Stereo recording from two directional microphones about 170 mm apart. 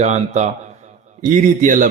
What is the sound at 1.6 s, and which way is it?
Speech, 50° right (ahead or behind).